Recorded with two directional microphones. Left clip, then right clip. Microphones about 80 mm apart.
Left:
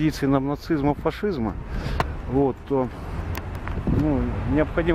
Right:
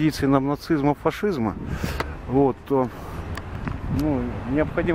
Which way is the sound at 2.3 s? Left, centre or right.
Right.